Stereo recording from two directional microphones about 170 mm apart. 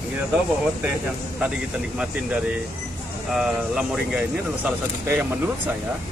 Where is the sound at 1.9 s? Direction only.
5° right (ahead or behind).